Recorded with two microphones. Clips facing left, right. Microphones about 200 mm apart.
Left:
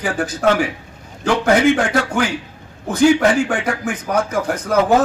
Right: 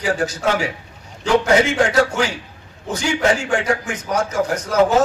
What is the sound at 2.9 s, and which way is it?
Speech, 55° left (ahead or behind).